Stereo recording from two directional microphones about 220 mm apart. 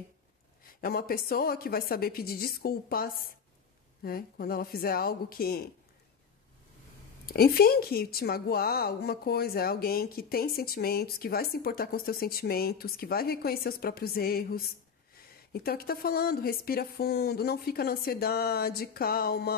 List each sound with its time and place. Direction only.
0.7 s a woman's voice: 45° left (ahead or behind)
7.2 s a woman's voice: 45° left (ahead or behind)